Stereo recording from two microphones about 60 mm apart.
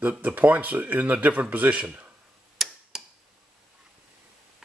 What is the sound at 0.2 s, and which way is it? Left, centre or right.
Speech, right.